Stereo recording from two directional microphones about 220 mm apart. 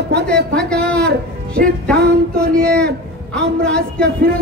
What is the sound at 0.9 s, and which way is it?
Speech, 45° right (ahead or behind).